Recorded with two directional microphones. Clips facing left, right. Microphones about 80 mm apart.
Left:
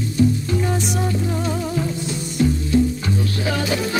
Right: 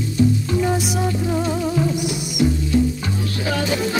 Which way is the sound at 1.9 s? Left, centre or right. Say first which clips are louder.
Right 3 dB; centre.